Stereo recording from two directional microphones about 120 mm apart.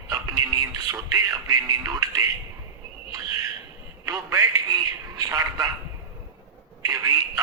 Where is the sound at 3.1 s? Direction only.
30° right (ahead or behind).